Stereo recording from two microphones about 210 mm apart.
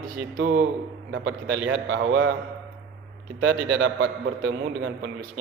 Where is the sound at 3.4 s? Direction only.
65° right (ahead or behind).